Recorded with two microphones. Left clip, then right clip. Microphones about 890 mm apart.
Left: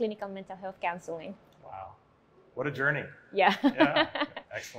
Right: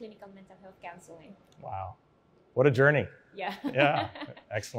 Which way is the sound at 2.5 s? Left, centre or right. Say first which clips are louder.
Right 7 dB; right.